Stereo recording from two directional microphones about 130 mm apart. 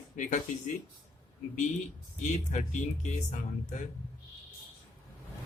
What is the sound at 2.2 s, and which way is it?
Speech, 70° left (ahead or behind).